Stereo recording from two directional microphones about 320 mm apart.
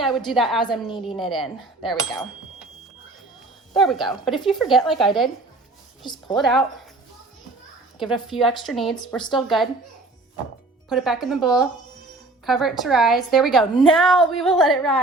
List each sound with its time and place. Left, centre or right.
0.3 s cutlery: centre
3.8 s cutlery: centre
6.3 s cutlery: centre
7.9 s cutlery: centre
10.8 s cutlery: centre